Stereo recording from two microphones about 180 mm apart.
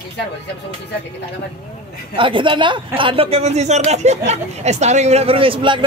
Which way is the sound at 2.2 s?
30° right (ahead or behind).